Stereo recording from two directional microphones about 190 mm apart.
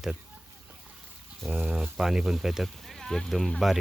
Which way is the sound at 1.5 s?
5° right (ahead or behind).